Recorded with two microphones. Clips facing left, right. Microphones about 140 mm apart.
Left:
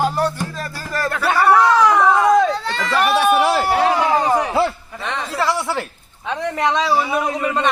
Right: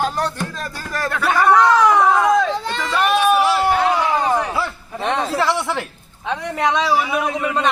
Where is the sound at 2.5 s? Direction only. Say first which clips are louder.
Even; 20° right (ahead or behind).